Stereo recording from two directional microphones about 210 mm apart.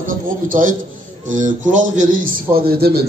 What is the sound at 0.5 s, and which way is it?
Speech, 40° right (ahead or behind).